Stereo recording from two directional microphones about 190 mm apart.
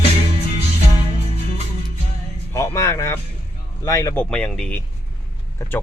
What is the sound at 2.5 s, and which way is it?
Speech, 15° left (ahead or behind).